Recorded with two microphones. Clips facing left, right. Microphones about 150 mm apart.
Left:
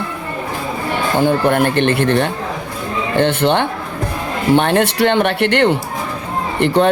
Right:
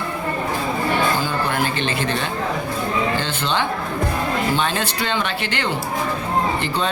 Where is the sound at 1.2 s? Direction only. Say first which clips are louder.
Left 8 dB; 60° left (ahead or behind).